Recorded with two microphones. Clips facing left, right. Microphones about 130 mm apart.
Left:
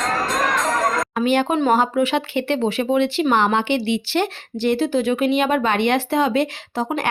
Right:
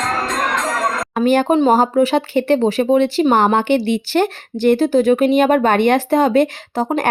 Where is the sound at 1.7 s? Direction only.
40° right (ahead or behind).